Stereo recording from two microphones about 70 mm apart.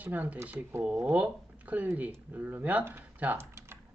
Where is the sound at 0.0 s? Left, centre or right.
Right.